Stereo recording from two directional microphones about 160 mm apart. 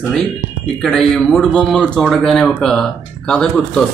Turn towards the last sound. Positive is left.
turn(degrees=5)  # may be behind; listen again after turning